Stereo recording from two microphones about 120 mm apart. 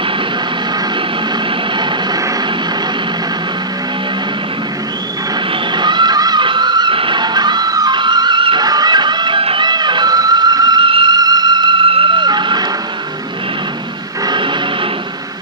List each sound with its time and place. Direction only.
5.8 s music: 40° right (ahead or behind)
14.2 s music: 40° right (ahead or behind)